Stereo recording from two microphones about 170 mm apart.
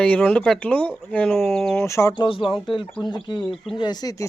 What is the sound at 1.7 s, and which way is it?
Speech, 15° left (ahead or behind).